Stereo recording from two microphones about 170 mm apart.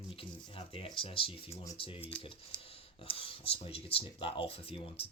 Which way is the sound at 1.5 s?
20° left (ahead or behind).